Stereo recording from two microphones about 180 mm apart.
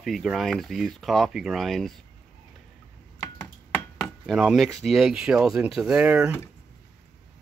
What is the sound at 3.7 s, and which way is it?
Speech, centre (ahead or behind).